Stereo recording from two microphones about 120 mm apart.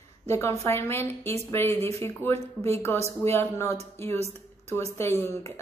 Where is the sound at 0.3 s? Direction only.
25° left (ahead or behind).